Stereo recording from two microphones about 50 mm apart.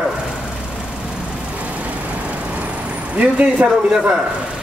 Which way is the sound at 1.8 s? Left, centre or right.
Right.